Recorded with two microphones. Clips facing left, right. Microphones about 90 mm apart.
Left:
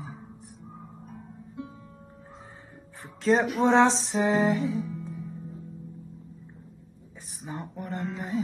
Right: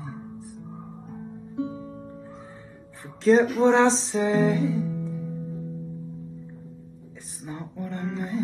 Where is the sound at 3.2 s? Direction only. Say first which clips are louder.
Right 4 dB; centre (ahead or behind).